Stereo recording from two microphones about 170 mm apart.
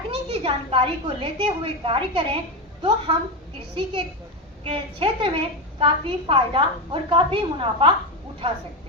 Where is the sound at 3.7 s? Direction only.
30° right (ahead or behind).